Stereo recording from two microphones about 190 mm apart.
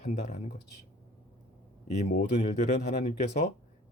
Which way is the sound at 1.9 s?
40° left (ahead or behind).